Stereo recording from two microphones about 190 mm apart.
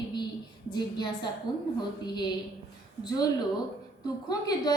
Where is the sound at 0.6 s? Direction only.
25° left (ahead or behind).